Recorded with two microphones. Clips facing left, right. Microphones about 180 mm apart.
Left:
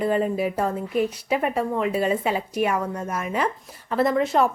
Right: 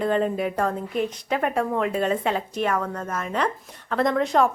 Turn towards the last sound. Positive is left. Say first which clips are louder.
# even
turn(degrees=5)  # may be behind; listen again after turning